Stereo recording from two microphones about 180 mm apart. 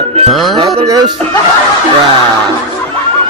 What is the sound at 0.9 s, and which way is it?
Speech, 20° right (ahead or behind).